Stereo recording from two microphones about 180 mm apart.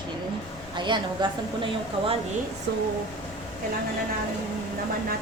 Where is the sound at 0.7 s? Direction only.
25° right (ahead or behind).